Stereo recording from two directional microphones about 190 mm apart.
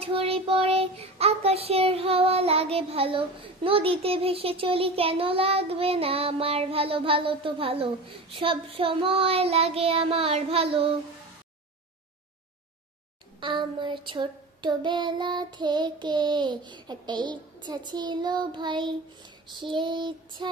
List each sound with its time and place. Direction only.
0.0 s child singing: 30° right (ahead or behind)
13.4 s child singing: 25° right (ahead or behind)